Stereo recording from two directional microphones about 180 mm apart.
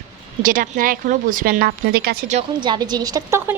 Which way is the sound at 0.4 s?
50° right (ahead or behind).